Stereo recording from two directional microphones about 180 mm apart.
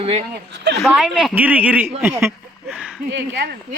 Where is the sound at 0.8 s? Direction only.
Centre (ahead or behind).